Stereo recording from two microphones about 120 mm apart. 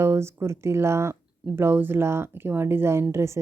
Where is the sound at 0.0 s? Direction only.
20° right (ahead or behind).